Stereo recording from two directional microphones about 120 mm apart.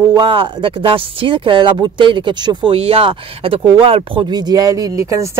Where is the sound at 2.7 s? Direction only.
55° right (ahead or behind).